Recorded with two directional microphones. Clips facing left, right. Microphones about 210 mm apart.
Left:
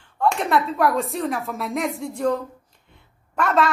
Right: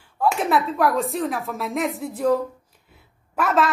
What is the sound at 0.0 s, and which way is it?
Speech, 5° right (ahead or behind).